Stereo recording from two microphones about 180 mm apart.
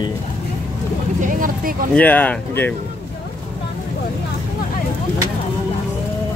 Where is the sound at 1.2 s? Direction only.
50° right (ahead or behind).